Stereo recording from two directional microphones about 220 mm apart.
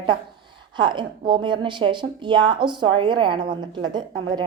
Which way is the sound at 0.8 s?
20° right (ahead or behind).